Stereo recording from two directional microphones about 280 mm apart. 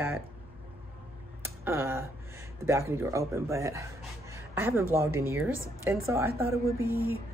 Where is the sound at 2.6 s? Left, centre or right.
Centre.